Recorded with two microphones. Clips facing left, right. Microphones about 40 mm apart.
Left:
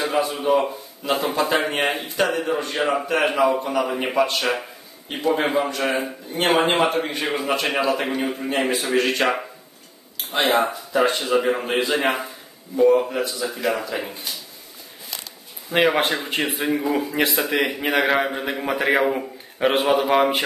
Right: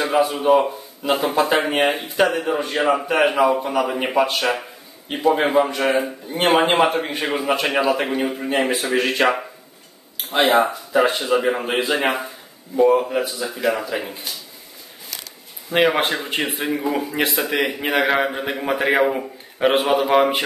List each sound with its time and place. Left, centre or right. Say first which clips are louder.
0.0 s speech: right 4 dB; centre
15.7 s a man's voice: right 1 dB; centre